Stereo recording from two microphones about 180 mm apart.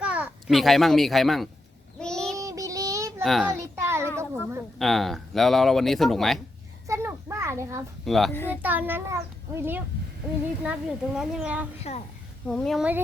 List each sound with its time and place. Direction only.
0.0 s a child's voice: 5° right (ahead or behind)
2.0 s child singing: 5° left (ahead or behind)
2.4 s child singing: 20° right (ahead or behind)
3.2 s speech: centre (ahead or behind)
3.5 s a sound: 15° right (ahead or behind)
4.8 s speech: centre (ahead or behind)
6.8 s children playing: 15° right (ahead or behind)
8.0 s a child's voice: centre (ahead or behind)
8.3 s a child's voice: 10° left (ahead or behind)
8.6 s a child's voice: 10° right (ahead or behind)
11.8 s a woman's voice: 35° left (ahead or behind)
12.5 s speech: centre (ahead or behind)